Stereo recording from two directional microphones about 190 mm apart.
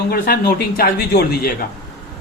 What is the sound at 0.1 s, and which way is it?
Speech, 55° left (ahead or behind).